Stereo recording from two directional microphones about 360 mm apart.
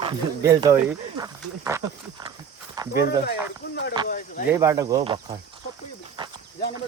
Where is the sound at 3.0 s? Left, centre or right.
Left.